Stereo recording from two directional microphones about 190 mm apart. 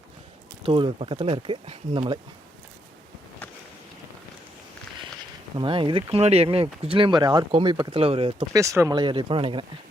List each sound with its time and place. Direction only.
0.6 s speech: 25° right (ahead or behind)
5.5 s speech: 25° right (ahead or behind)